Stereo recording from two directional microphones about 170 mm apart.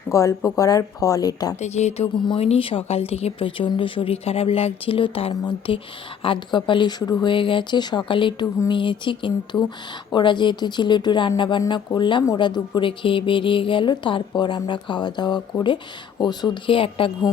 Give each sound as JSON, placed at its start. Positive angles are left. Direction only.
{"t": 0.1, "sound": "speech", "side_deg": 20}
{"t": 1.6, "sound": "a woman's voice", "side_deg": 40}